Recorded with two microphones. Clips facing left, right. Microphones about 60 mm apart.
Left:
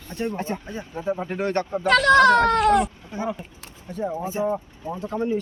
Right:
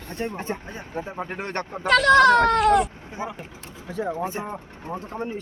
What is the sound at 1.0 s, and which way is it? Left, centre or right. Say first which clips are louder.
Speech: left 5 dB; right.